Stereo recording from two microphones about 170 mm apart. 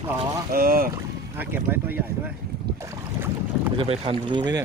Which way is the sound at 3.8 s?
35° right (ahead or behind).